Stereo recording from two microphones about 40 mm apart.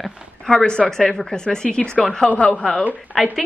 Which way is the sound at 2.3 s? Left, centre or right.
Left.